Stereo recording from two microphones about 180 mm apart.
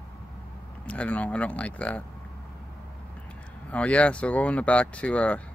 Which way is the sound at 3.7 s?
5° left (ahead or behind).